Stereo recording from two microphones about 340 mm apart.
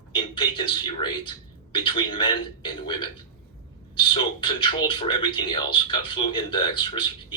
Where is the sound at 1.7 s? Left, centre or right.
Centre.